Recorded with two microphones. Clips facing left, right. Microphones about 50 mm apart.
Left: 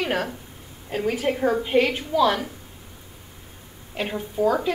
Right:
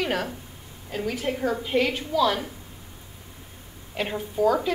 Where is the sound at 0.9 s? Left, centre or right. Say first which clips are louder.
Left 4 dB; left.